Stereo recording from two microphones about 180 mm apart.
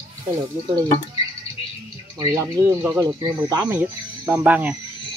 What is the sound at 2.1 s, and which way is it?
Speech, 15° right (ahead or behind).